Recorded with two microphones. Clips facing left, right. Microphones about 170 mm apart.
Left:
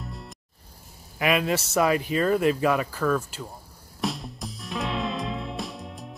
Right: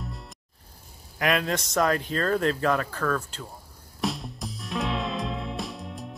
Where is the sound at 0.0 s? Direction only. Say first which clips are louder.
Even; centre (ahead or behind).